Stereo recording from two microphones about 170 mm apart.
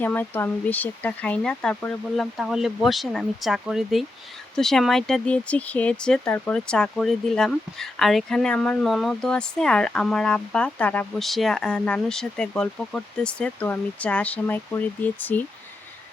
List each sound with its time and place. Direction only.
0.0 s speech: 10° left (ahead or behind)